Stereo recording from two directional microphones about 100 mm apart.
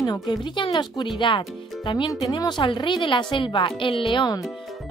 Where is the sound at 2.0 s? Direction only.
40° left (ahead or behind).